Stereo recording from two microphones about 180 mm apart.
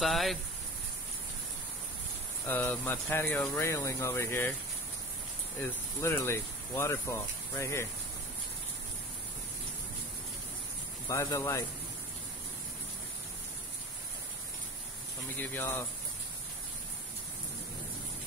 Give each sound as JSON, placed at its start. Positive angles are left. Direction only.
{"t": 0.0, "sound": "speech", "side_deg": 0}
{"t": 2.4, "sound": "speech", "side_deg": 10}
{"t": 5.6, "sound": "speech", "side_deg": 15}
{"t": 11.1, "sound": "speech", "side_deg": 15}
{"t": 15.4, "sound": "speech", "side_deg": 10}